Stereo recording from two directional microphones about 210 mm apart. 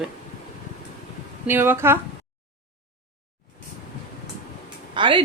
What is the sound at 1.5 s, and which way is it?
Speech, 10° right (ahead or behind).